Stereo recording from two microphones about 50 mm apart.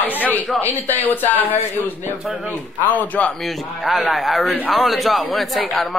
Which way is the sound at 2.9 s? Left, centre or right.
Left.